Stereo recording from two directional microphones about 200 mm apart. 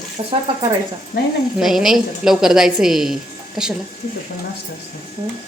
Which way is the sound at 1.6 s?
Centre (ahead or behind).